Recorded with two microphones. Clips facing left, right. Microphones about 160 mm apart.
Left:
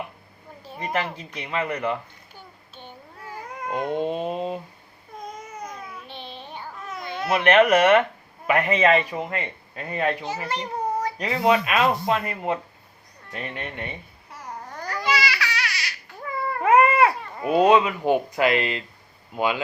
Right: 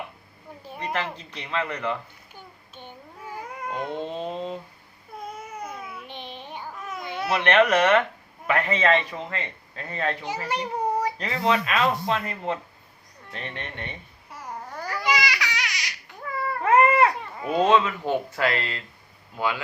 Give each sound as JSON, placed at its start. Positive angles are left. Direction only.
{"t": 0.9, "sound": "a man's voice", "side_deg": 10}
{"t": 2.3, "sound": "a sound", "side_deg": -15}
{"t": 3.7, "sound": "a man's voice", "side_deg": 15}
{"t": 5.6, "sound": "babbling", "side_deg": -5}
{"t": 7.3, "sound": "a man's voice", "side_deg": 10}
{"t": 10.5, "sound": "a sound", "side_deg": -10}
{"t": 11.2, "sound": "a man's voice", "side_deg": 10}
{"t": 14.7, "sound": "babbling", "side_deg": -10}
{"t": 16.6, "sound": "baby cry", "side_deg": 10}
{"t": 19.4, "sound": "a man's voice", "side_deg": 15}